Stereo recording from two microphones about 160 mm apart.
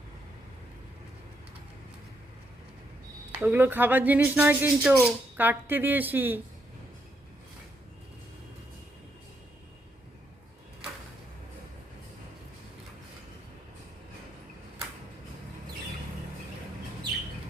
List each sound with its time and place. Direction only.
3.3 s speech: 10° right (ahead or behind)